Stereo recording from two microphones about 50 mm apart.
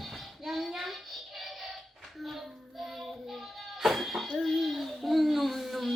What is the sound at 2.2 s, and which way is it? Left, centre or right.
Child singing, centre.